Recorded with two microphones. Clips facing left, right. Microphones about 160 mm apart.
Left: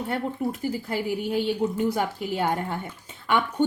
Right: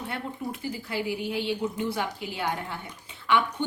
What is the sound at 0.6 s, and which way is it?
A woman's voice, 45° left (ahead or behind).